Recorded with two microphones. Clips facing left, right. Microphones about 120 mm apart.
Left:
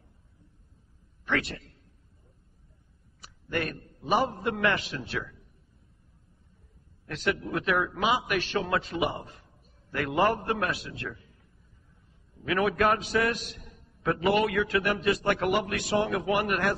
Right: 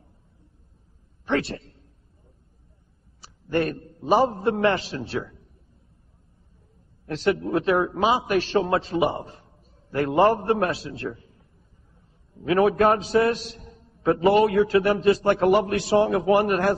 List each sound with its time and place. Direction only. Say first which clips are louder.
1.2 s a man's voice: right 5 dB; 30° right (ahead or behind)
3.2 s a man's voice: right 7 dB; 30° right (ahead or behind)
7.1 s a man's voice: right 7 dB; 30° right (ahead or behind)
12.4 s a man's voice: right 6 dB; 30° right (ahead or behind)